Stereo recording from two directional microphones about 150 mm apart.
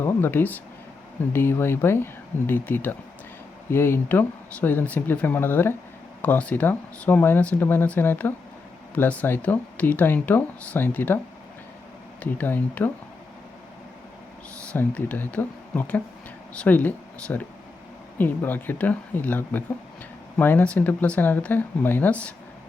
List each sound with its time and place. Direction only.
0.0 s speech: 15° left (ahead or behind)
12.2 s speech: 10° left (ahead or behind)
14.7 s speech: 10° left (ahead or behind)